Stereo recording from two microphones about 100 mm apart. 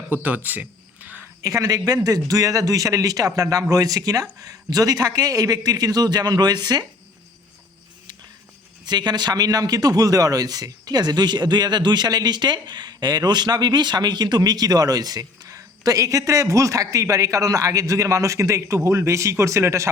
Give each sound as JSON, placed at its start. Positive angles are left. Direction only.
{"t": 0.1, "sound": "a sound", "side_deg": -15}
{"t": 1.4, "sound": "a man's voice", "side_deg": -35}
{"t": 8.8, "sound": "a man's voice", "side_deg": -45}